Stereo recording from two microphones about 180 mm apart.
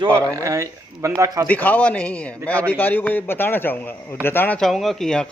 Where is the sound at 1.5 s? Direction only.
10° left (ahead or behind).